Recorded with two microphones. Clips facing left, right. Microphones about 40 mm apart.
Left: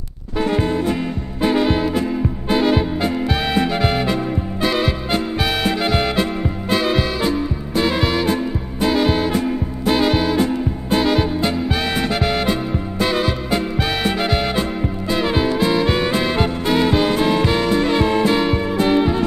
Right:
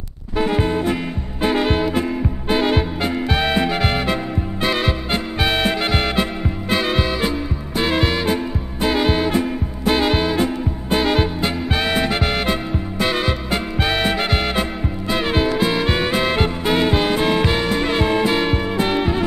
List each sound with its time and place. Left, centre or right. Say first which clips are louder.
0.4 s music: even; centre